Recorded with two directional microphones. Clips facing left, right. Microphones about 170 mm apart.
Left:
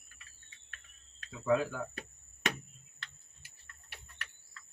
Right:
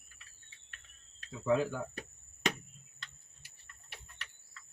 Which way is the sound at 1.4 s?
25° right (ahead or behind).